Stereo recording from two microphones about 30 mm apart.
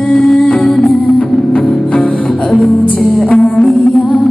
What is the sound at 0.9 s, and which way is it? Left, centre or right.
Music, left.